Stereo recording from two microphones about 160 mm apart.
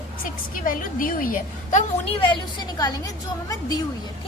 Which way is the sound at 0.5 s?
60° left (ahead or behind).